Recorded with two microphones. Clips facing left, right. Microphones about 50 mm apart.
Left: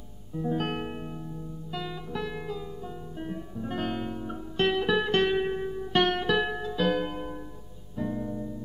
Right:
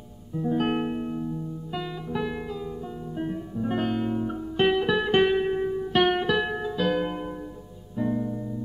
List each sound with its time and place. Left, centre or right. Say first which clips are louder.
0.3 s music: right 4 dB; centre